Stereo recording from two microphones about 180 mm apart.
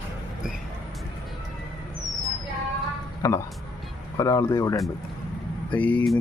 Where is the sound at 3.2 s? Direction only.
15° left (ahead or behind).